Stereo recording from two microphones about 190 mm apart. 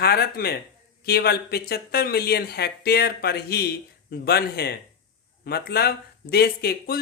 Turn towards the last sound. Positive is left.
turn(degrees=55)  # may be behind; listen again after turning